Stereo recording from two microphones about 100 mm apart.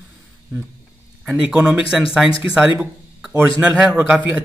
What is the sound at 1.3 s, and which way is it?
A man's voice, 15° right (ahead or behind).